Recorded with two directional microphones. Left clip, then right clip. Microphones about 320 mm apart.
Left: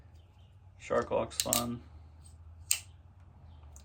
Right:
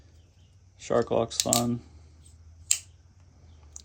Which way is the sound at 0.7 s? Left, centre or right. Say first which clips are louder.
Right 6 dB; right.